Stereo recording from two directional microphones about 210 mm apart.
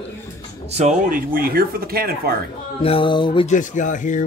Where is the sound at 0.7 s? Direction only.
35° right (ahead or behind).